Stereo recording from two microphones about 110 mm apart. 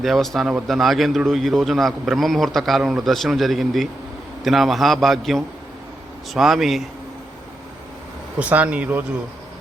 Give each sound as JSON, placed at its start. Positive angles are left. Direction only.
{"t": 0.0, "sound": "a man's voice", "side_deg": 0}
{"t": 8.4, "sound": "speech", "side_deg": -15}